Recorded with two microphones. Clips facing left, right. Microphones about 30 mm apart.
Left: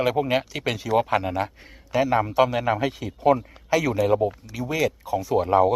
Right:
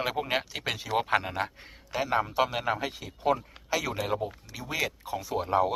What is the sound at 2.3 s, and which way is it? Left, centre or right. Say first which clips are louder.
Speech: left 7 dB; centre.